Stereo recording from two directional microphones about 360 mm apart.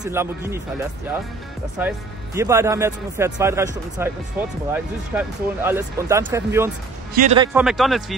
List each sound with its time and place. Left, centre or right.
0.0 s speech: centre
1.8 s speech: centre
7.2 s speech: centre
7.5 s speech: centre